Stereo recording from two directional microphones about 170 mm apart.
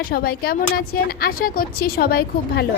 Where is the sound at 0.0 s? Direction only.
60° left (ahead or behind).